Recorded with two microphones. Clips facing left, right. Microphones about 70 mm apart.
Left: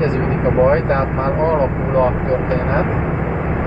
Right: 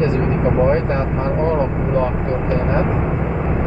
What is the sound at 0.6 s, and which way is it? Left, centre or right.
Speech, left.